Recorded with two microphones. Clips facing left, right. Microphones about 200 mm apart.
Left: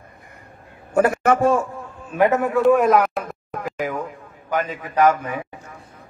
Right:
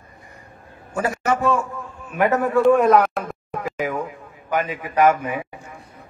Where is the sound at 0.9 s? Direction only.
55° left (ahead or behind).